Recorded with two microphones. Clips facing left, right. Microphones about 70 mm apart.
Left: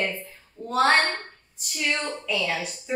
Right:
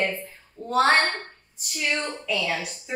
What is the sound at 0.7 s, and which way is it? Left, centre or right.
A child's voice, centre.